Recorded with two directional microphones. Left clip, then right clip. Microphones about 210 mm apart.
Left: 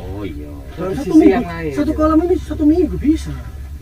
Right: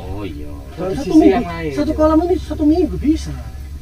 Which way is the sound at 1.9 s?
20° left (ahead or behind).